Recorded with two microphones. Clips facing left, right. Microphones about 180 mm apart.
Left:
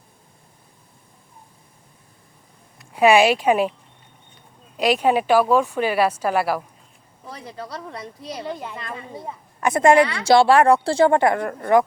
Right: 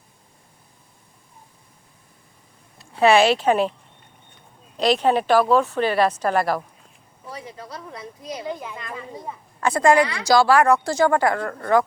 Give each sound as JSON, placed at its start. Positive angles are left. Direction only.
{"t": 2.9, "sound": "a woman's voice", "side_deg": 10}
{"t": 4.8, "sound": "a woman's voice", "side_deg": 10}
{"t": 8.2, "sound": "a woman's voice", "side_deg": 30}